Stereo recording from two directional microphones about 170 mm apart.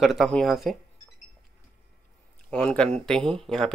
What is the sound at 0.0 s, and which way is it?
Speech, centre (ahead or behind).